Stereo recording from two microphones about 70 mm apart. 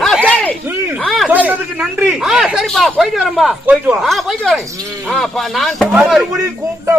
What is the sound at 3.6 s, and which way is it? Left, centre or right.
Speech, right.